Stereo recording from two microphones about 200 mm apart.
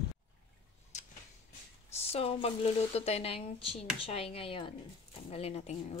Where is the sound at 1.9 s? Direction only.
30° left (ahead or behind).